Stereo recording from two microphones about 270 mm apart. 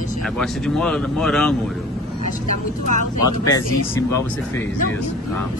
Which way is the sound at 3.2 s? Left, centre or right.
Centre.